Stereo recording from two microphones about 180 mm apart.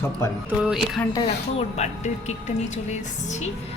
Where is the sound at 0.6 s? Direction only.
Centre (ahead or behind).